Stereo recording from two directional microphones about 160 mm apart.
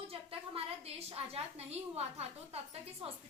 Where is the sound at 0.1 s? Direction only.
35° right (ahead or behind).